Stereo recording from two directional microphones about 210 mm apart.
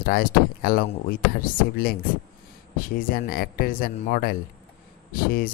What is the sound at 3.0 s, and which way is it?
Speech, 45° left (ahead or behind).